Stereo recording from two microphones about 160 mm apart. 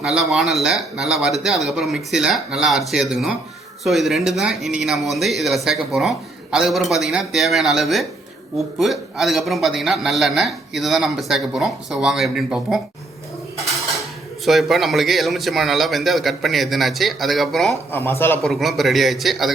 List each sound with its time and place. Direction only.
0.0 s a man's voice: centre (ahead or behind)
14.4 s a man's voice: centre (ahead or behind)
17.9 s a man's voice: 15° left (ahead or behind)
18.4 s a man's voice: centre (ahead or behind)